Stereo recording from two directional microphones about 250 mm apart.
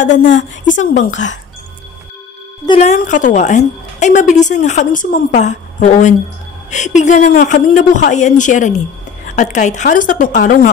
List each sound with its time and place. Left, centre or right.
0.1 s a woman's voice: left
0.7 s a woman's voice: left
2.6 s a woman's voice: left